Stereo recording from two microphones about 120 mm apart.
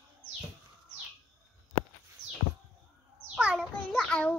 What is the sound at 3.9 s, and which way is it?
Child singing, 10° left (ahead or behind).